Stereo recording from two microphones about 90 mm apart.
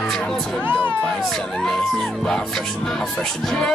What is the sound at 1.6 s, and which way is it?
Music, 5° left (ahead or behind).